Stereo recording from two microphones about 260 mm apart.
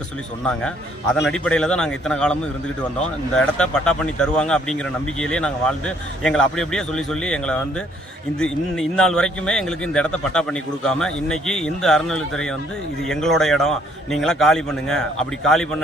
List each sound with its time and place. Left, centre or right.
1.2 s speech: centre